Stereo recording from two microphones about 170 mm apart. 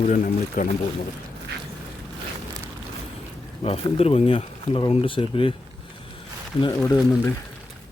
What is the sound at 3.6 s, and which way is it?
Speech, 35° left (ahead or behind).